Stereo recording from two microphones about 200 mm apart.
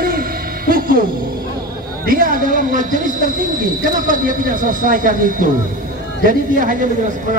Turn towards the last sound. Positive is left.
turn(degrees=-40)  # may be behind; listen again after turning